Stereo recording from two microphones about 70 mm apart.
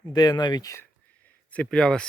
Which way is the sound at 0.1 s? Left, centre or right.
Left.